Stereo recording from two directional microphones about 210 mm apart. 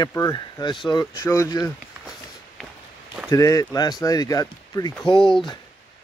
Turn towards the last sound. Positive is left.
turn(degrees=25)  # may be behind; listen again after turning